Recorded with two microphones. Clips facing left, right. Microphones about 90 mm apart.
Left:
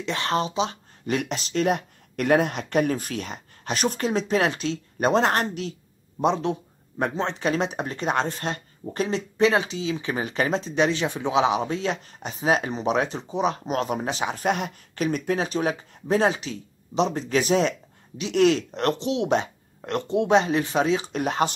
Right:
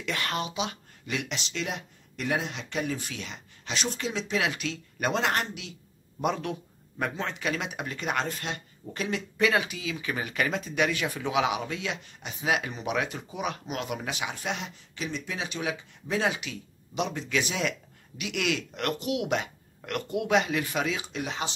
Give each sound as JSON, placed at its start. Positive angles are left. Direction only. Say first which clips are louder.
{"t": 0.0, "sound": "speech", "louder": "left 6 dB", "side_deg": 30}
{"t": 6.2, "sound": "speech", "louder": "left 6 dB", "side_deg": 25}
{"t": 21.1, "sound": "speech", "louder": "left 9 dB", "side_deg": 50}